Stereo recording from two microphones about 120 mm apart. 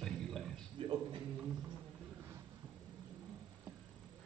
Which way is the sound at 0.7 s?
45° right (ahead or behind).